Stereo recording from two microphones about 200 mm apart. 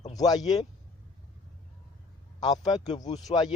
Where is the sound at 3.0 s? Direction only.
35° left (ahead or behind).